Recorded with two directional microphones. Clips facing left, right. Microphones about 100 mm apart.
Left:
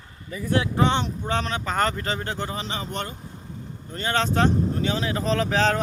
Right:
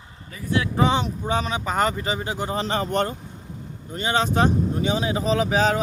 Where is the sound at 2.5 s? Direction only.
45° right (ahead or behind).